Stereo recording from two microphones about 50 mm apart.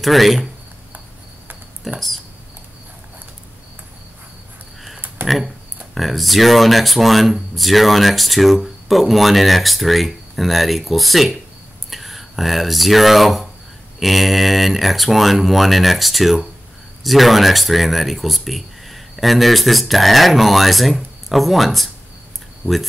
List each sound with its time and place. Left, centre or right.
0.0 s speech: centre
1.9 s speech: centre
5.2 s a sound: right
5.9 s speech: centre